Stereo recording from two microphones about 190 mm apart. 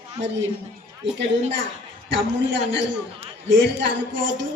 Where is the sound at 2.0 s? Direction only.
70° right (ahead or behind).